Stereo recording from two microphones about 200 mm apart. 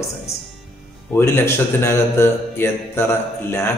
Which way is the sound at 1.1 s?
10° left (ahead or behind).